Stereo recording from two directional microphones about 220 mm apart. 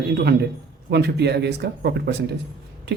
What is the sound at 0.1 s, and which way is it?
Speech, 50° right (ahead or behind).